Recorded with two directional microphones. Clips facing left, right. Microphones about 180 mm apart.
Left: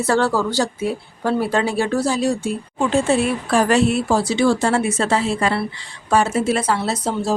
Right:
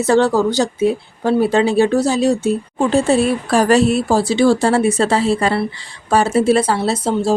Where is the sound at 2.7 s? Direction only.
35° right (ahead or behind).